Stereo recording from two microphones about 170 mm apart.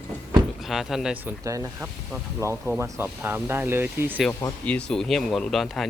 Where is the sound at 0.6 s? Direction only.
Centre (ahead or behind).